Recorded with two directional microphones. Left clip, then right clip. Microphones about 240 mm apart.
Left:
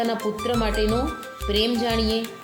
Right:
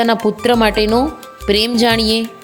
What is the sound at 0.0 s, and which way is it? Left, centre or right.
Speech, right.